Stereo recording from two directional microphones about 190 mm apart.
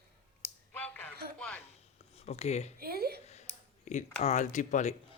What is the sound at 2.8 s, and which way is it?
Speech, 55° right (ahead or behind).